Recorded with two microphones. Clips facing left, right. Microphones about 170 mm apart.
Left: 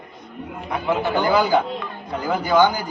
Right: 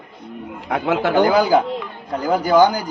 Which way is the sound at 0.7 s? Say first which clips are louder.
Right 4 dB; 90° right.